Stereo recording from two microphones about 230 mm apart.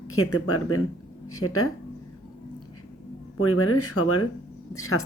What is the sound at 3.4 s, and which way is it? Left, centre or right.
Speech, left.